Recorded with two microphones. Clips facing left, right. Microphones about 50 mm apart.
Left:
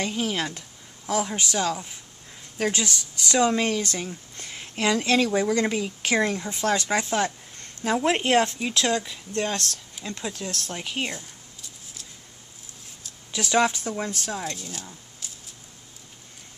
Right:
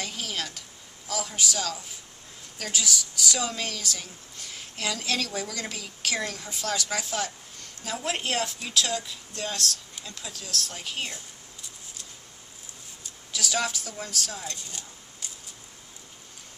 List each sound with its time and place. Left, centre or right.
0.1 s a woman's voice: left
13.3 s speech: left
14.5 s speech: centre